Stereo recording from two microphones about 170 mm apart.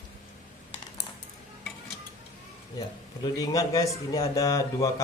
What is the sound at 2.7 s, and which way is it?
Speech, 25° left (ahead or behind).